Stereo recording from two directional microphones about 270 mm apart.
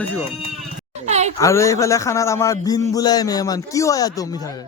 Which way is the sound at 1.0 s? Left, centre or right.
Right.